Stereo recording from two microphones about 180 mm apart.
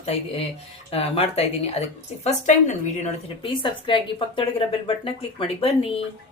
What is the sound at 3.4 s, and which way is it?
A woman's voice, 30° left (ahead or behind).